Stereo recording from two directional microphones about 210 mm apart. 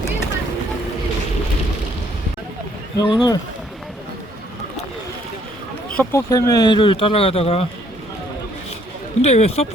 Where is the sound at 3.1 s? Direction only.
20° left (ahead or behind).